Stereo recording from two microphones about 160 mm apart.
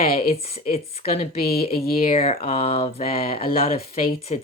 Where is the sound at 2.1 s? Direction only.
35° left (ahead or behind).